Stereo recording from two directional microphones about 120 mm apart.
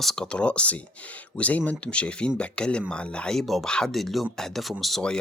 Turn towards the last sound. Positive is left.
turn(degrees=5)  # may be behind; listen again after turning